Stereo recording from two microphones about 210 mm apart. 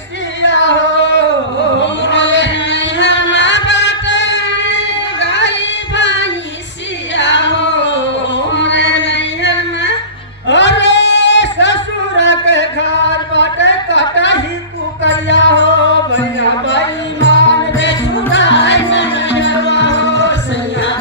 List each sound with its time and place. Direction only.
0.4 s singing: 60° left (ahead or behind)
1.8 s music: 60° left (ahead or behind)
5.9 s singing: 60° left (ahead or behind)
7.2 s music: 60° left (ahead or behind)
10.5 s a sound: 60° left (ahead or behind)
15.0 s music: 60° left (ahead or behind)